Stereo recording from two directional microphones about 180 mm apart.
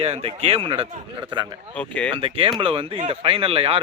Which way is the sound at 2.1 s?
30° right (ahead or behind).